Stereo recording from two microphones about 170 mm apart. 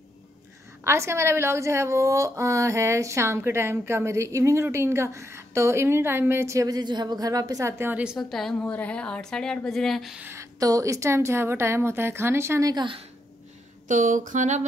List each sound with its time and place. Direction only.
0.8 s a woman's voice: 15° right (ahead or behind); by 10.2 s centre (ahead or behind)
10.2 s a woman's voice: 15° right (ahead or behind)
13.8 s a sound: 50° right (ahead or behind)